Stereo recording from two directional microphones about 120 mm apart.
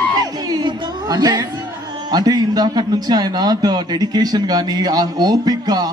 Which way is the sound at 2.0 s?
35° right (ahead or behind).